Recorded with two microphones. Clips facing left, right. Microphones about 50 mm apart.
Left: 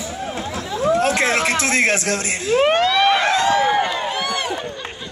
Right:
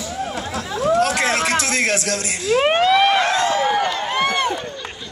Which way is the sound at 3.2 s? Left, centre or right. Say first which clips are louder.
Left 1 dB; left.